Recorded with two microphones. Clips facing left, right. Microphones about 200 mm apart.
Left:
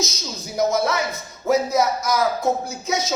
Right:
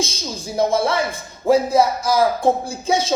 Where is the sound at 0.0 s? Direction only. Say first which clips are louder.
Right 3 dB; 30° right (ahead or behind).